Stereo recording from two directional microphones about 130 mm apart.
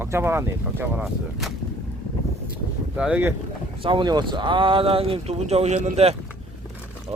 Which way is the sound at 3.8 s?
40° right (ahead or behind).